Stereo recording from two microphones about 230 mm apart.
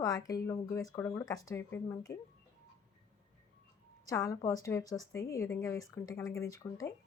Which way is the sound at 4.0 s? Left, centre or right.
Centre.